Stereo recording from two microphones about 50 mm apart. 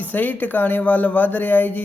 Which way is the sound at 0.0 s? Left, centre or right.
Left.